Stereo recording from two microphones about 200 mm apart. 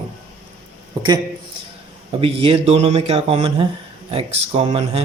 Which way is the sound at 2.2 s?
25° right (ahead or behind).